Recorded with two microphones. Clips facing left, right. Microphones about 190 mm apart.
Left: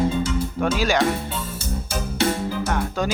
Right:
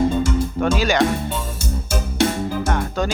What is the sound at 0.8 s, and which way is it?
Speech, 5° left (ahead or behind).